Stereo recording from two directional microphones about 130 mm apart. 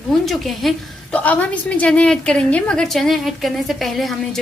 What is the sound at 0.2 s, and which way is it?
A woman's voice, centre (ahead or behind).